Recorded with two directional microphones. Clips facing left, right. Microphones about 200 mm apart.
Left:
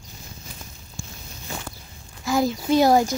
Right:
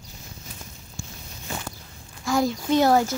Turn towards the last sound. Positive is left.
turn(degrees=15)  # may be behind; listen again after turning